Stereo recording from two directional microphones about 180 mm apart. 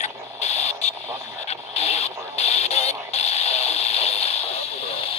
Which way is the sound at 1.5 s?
35° left (ahead or behind).